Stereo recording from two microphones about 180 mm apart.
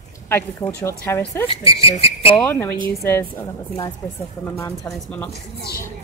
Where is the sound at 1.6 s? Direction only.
30° left (ahead or behind).